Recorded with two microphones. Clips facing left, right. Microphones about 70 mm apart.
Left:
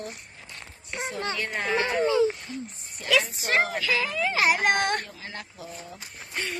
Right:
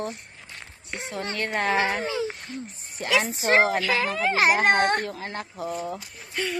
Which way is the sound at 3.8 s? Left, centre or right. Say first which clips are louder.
Right 2 dB; right.